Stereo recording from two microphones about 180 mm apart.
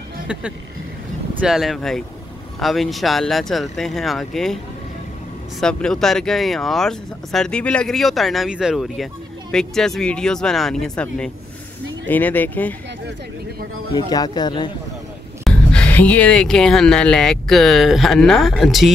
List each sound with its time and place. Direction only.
1.4 s speech: centre (ahead or behind)
5.6 s speech: 5° left (ahead or behind)
13.9 s speech: 20° left (ahead or behind)
15.4 s speech: 5° left (ahead or behind)